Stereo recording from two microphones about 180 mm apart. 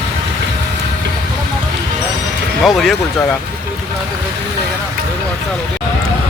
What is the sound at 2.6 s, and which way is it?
Speech, centre (ahead or behind).